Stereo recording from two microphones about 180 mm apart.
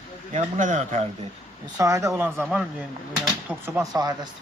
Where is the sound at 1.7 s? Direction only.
20° right (ahead or behind).